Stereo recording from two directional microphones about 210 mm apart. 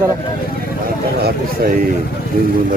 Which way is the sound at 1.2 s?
45° right (ahead or behind).